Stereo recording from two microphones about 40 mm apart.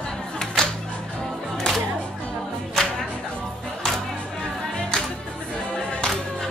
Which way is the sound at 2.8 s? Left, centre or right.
Centre.